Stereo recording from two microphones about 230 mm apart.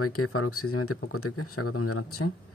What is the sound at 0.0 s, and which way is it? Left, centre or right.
Speech, left.